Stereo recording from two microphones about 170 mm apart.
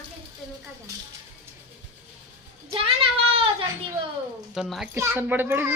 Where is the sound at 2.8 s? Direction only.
35° right (ahead or behind).